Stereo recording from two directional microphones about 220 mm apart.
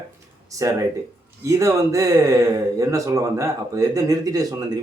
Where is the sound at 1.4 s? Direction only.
15° right (ahead or behind).